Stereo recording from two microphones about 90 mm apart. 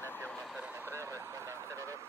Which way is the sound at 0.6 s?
20° right (ahead or behind).